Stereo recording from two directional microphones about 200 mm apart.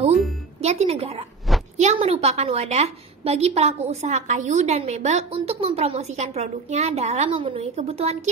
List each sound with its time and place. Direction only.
0.6 s a woman's voice: 30° right (ahead or behind)